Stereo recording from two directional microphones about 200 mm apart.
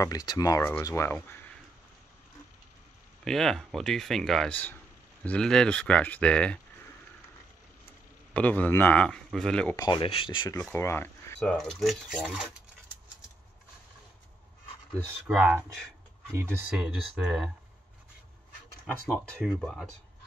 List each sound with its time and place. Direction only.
0.0 s a man's voice: 20° left (ahead or behind)
3.3 s speech: centre (ahead or behind)
8.3 s a man's voice: 5° left (ahead or behind)
9.8 s speech: 20° left (ahead or behind)
10.6 s speech: 10° left (ahead or behind)
15.2 s speech: 5° right (ahead or behind)
16.7 s speech: 5° right (ahead or behind)
19.0 s speech: 5° left (ahead or behind)